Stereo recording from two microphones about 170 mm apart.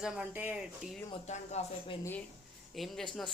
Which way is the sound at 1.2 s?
40° left (ahead or behind).